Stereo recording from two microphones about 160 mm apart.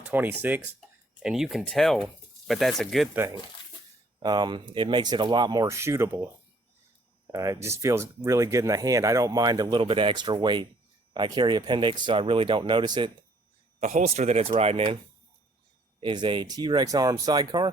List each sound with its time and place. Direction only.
0.1 s speech: 10° right (ahead or behind)
4.2 s speech: 25° right (ahead or behind)
7.3 s speech: 20° right (ahead or behind)
13.8 s speech: 50° right (ahead or behind)
16.0 s speech: 30° right (ahead or behind)